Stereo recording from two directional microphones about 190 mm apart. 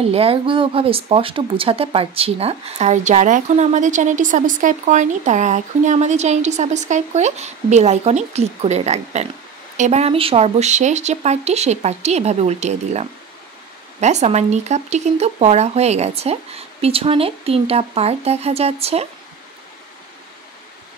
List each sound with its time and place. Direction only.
0.0 s speech: 30° right (ahead or behind)